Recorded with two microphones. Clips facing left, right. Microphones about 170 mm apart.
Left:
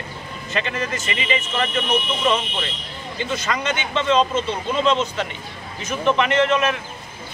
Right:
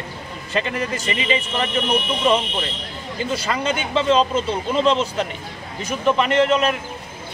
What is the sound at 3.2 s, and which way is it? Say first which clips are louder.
Speech: right 2 dB; 35° right (ahead or behind).